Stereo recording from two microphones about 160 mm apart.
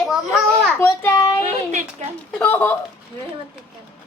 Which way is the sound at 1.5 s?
45° right (ahead or behind).